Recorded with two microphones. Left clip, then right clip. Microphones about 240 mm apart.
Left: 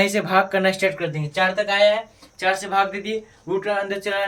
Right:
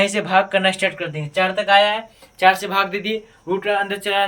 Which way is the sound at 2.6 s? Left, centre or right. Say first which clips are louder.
Right 1 dB; right.